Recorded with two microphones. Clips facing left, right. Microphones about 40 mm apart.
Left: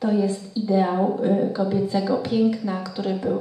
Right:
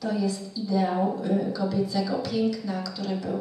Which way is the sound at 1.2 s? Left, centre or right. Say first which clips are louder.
Left 5 dB; left.